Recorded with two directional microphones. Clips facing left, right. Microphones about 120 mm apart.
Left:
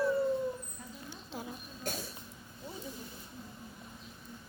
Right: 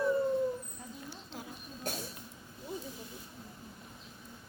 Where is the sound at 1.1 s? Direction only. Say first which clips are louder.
Left 2 dB; 20° left (ahead or behind).